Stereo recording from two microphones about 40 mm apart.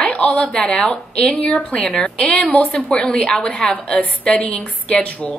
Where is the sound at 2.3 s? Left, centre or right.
Left.